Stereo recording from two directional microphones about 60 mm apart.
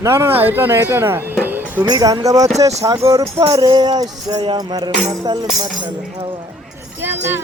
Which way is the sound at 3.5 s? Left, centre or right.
Right.